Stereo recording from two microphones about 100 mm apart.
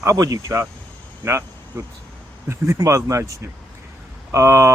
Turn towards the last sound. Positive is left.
turn(degrees=-30)  # may be behind; listen again after turning